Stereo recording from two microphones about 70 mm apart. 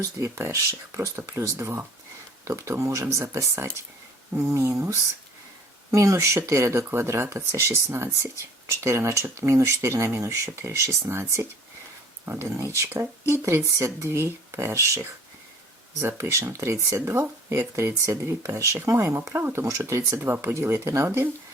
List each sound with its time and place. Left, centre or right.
0.2 s speech: right
19.6 s speech: right
20.1 s speech: right